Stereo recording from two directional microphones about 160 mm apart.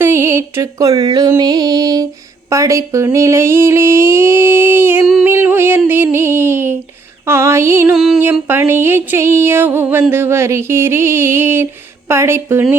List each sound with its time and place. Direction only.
0.0 s music: 15° right (ahead or behind)
7.9 s music: centre (ahead or behind)
8.2 s music: 10° right (ahead or behind)